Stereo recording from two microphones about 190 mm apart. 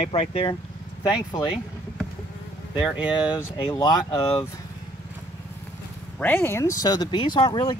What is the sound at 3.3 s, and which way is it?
Speech, 20° left (ahead or behind).